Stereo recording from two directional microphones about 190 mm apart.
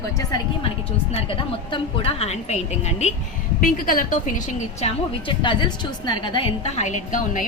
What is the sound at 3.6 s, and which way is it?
A woman's voice, 50° left (ahead or behind).